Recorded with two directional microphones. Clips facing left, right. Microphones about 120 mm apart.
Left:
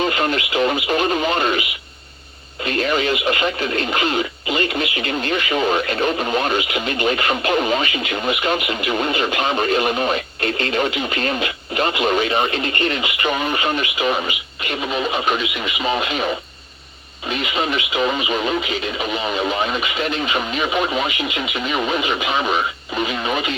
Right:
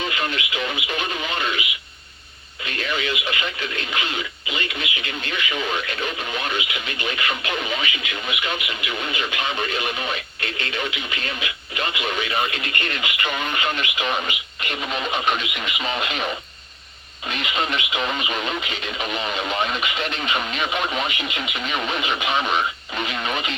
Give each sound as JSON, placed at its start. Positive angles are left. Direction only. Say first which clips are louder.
{"t": 0.0, "sound": "radio", "louder": "left 7 dB", "side_deg": 40}
{"t": 2.6, "sound": "speech", "louder": "left 7 dB", "side_deg": 40}
{"t": 14.0, "sound": "speech", "louder": "left 4 dB", "side_deg": 5}